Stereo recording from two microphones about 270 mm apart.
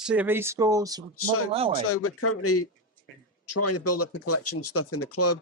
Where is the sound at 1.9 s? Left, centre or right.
Left.